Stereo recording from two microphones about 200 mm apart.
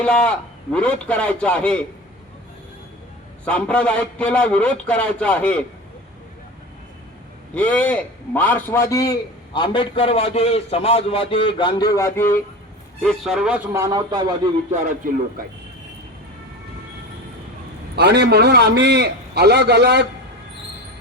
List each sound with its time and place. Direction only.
0.0 s a man's voice: 5° left (ahead or behind)
3.4 s a man's voice: 5° left (ahead or behind)
7.5 s a man's voice: 5° left (ahead or behind)
13.0 s a man's voice: centre (ahead or behind)
13.7 s a man's voice: 15° right (ahead or behind)
15.0 s a man's voice: 45° right (ahead or behind)
17.9 s a man's voice: 55° right (ahead or behind)